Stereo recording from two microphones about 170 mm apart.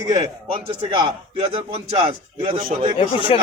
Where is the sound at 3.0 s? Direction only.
30° left (ahead or behind).